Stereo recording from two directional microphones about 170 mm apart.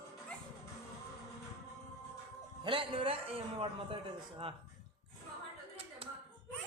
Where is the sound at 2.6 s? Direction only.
30° right (ahead or behind).